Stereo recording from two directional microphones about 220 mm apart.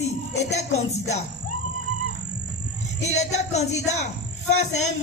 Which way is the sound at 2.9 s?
30° left (ahead or behind).